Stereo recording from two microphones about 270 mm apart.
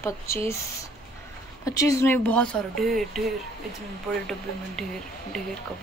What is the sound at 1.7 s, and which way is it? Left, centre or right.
A woman's voice, centre.